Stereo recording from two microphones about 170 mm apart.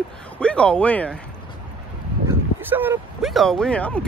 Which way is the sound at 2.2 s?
10° right (ahead or behind).